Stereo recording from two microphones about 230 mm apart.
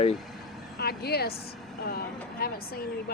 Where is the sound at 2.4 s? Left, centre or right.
Left.